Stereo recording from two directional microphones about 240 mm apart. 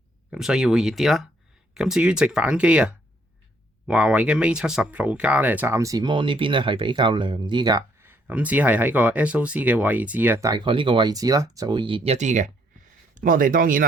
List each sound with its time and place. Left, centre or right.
0.3 s speech: centre; by 13.8 s right